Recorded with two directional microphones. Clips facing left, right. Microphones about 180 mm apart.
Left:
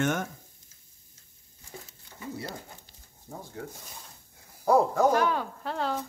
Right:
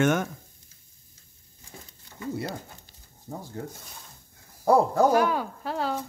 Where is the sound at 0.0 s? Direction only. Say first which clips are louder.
Right 5 dB; 85° right.